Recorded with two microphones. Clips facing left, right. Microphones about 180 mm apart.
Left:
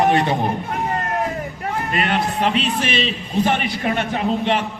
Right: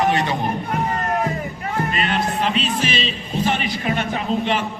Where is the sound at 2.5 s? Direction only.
60° left (ahead or behind).